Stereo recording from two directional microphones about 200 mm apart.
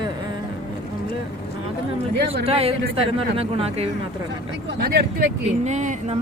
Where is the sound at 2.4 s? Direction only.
30° right (ahead or behind).